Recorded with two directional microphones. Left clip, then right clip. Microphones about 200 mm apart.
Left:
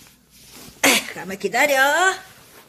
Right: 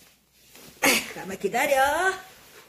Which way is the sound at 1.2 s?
35° left (ahead or behind).